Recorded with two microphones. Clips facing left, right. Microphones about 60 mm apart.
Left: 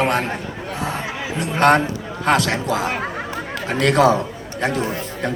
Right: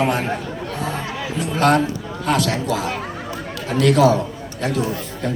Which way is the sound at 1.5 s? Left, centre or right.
Left.